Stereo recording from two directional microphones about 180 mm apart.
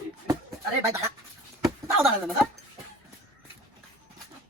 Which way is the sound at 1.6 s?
Centre (ahead or behind).